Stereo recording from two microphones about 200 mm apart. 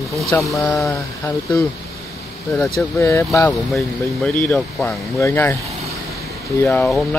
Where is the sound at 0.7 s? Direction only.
15° left (ahead or behind).